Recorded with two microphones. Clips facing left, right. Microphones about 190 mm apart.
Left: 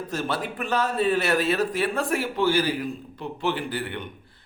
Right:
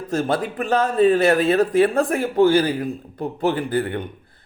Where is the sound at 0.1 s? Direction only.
50° right (ahead or behind).